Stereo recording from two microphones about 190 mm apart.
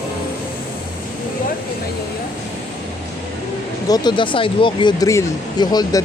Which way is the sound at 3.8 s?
20° left (ahead or behind).